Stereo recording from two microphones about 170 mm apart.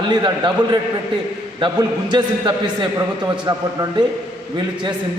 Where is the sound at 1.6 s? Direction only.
25° right (ahead or behind).